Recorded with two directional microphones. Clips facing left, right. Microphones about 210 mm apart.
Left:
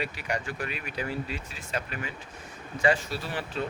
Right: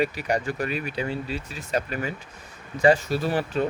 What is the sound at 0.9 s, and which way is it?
Speech, 25° right (ahead or behind).